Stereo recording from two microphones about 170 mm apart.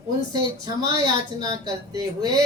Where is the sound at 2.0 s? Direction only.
25° right (ahead or behind).